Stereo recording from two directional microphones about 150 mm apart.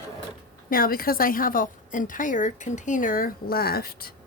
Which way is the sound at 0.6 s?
70° left (ahead or behind).